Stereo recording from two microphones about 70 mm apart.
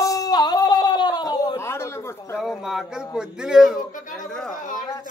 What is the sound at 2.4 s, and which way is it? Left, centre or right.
A man's voice, centre.